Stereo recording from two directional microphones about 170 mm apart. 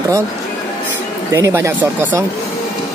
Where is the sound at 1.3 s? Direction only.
15° right (ahead or behind).